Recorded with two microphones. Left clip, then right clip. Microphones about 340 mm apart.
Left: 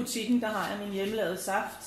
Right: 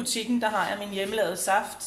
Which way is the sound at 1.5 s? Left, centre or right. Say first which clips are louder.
Right 7 dB; right.